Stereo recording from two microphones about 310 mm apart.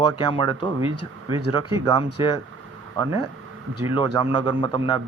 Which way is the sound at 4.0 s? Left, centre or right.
Centre.